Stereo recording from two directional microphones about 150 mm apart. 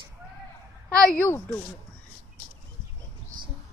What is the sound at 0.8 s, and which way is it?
Speech, 5° left (ahead or behind).